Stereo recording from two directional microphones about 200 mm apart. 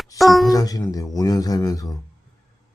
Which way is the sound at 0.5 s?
20° left (ahead or behind).